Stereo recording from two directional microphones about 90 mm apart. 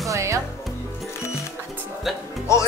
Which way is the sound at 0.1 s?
35° right (ahead or behind).